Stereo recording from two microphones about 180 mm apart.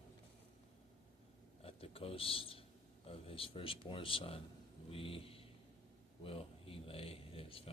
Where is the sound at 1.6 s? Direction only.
30° left (ahead or behind).